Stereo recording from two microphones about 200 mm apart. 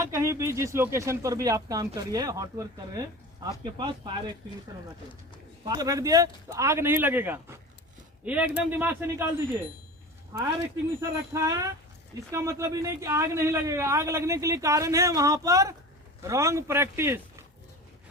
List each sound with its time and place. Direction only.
0.0 s speech: 15° right (ahead or behind)
5.6 s speech: 20° right (ahead or behind)
11.0 s speech: 15° right (ahead or behind)